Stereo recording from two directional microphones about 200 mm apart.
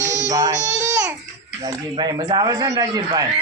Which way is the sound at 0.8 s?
15° right (ahead or behind).